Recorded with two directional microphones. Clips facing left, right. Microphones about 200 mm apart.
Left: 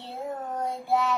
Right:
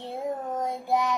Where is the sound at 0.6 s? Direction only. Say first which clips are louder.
Left 1 dB; 15° right (ahead or behind).